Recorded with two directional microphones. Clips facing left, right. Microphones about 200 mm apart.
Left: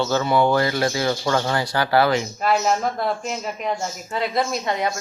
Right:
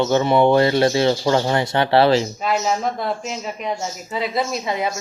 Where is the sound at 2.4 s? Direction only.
Centre (ahead or behind).